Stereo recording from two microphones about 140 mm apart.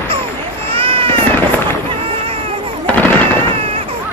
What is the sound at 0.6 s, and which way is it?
Baby cry, 40° right (ahead or behind).